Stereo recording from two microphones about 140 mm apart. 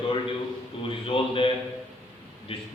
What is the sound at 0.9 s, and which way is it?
Speech, 40° left (ahead or behind).